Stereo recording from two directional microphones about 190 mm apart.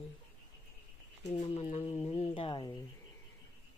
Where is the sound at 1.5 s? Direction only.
35° left (ahead or behind).